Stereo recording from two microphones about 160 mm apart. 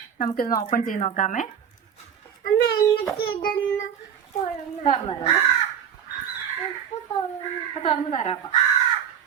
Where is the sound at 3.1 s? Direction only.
65° left (ahead or behind).